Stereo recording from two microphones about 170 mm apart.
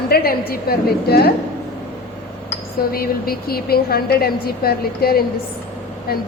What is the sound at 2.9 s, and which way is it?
A woman's voice, 60° left (ahead or behind).